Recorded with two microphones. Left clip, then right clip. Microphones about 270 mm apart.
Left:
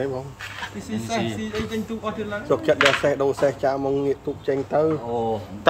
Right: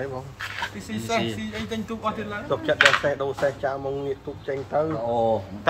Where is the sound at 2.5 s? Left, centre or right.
Left.